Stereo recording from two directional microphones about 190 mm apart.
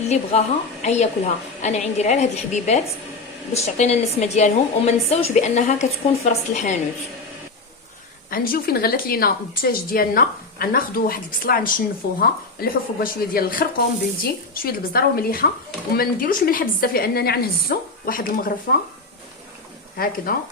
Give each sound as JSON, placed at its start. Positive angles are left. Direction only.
{"t": 0.1, "sound": "a woman's voice", "side_deg": 35}
{"t": 8.3, "sound": "speech", "side_deg": 50}
{"t": 20.3, "sound": "speech", "side_deg": 50}